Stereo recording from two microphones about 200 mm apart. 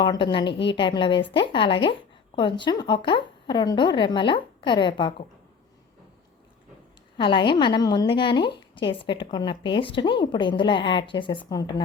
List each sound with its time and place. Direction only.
0.0 s a woman's voice: 25° left (ahead or behind)
7.2 s a woman's voice: 25° left (ahead or behind)